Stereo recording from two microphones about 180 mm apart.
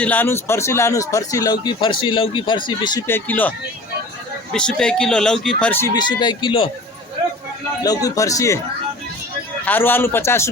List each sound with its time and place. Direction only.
0.0 s speech: 10° left (ahead or behind); by 3.0 s 25° left (ahead or behind)
3.1 s a man's voice: 10° left (ahead or behind)
4.5 s a man's voice: 5° left (ahead or behind)
5.9 s speech: 25° left (ahead or behind)
7.9 s speech: 20° left (ahead or behind)
9.6 s a man's voice: 10° left (ahead or behind)